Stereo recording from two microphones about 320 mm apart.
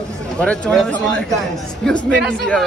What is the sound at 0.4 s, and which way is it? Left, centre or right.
A man's voice, centre.